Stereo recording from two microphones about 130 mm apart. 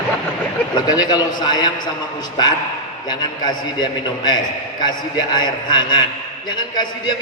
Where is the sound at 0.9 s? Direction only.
30° left (ahead or behind).